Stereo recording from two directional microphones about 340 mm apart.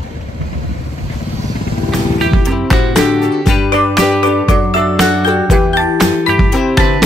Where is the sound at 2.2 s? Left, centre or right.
Centre.